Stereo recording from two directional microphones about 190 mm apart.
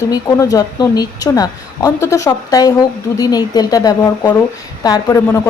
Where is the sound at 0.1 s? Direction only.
15° left (ahead or behind).